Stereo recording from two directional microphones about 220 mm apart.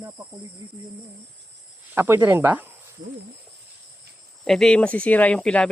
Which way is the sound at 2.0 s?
10° right (ahead or behind).